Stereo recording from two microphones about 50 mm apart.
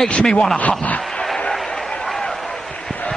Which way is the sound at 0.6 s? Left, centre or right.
Left.